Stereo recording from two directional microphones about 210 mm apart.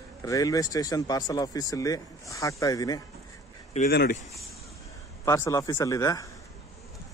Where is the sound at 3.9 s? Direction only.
50° left (ahead or behind).